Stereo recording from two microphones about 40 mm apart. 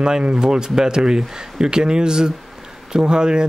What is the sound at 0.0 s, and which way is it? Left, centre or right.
Speech, centre.